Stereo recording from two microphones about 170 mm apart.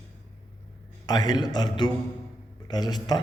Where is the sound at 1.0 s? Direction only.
25° left (ahead or behind).